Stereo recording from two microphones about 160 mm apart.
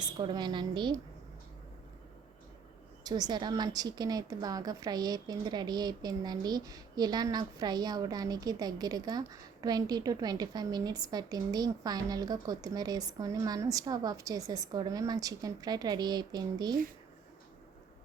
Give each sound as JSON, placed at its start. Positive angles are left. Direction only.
{"t": 0.0, "sound": "speech", "side_deg": -25}
{"t": 3.0, "sound": "speech", "side_deg": -25}